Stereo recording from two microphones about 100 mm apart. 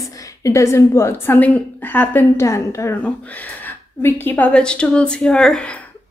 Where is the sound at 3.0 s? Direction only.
15° left (ahead or behind).